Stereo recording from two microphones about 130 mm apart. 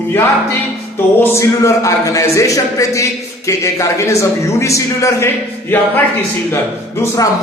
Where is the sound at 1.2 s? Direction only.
25° left (ahead or behind).